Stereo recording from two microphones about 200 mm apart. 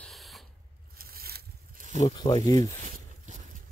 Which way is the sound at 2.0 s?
20° left (ahead or behind).